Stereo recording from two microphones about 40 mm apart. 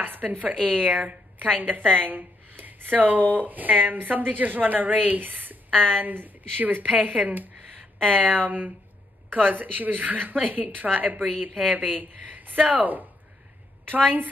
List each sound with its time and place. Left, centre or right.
0.0 s a woman's voice: right